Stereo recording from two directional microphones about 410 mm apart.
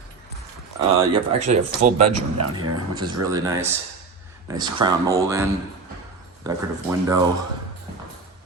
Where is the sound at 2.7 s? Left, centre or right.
Centre.